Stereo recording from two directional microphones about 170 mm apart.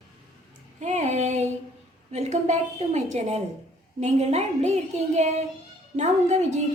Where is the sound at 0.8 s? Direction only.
40° right (ahead or behind).